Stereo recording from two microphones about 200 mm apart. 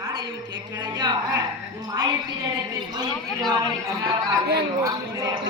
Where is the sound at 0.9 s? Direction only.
20° right (ahead or behind).